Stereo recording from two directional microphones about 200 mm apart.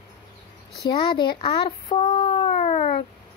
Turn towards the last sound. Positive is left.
turn(degrees=30)  # may be behind; listen again after turning